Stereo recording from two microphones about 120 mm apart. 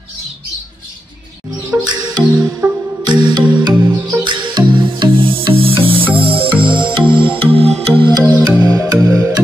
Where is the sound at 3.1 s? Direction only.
40° right (ahead or behind).